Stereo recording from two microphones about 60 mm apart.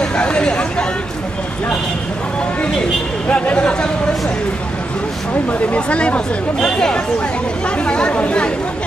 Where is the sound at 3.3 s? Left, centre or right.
Centre.